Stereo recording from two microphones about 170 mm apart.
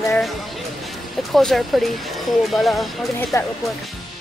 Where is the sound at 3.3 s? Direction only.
20° left (ahead or behind).